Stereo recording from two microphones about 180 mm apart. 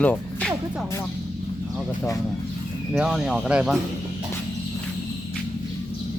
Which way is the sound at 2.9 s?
Centre (ahead or behind).